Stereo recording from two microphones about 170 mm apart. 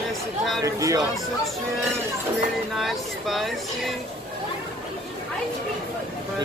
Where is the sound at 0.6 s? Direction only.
20° right (ahead or behind).